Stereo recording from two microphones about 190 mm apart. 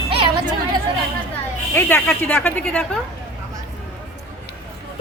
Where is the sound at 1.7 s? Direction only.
10° left (ahead or behind).